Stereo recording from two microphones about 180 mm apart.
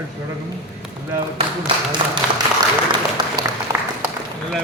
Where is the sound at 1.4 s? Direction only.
30° right (ahead or behind).